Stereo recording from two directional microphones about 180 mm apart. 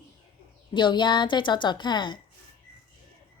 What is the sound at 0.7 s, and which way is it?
A woman's voice, 25° left (ahead or behind).